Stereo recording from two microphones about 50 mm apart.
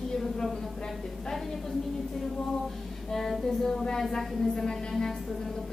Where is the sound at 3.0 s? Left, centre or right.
Centre.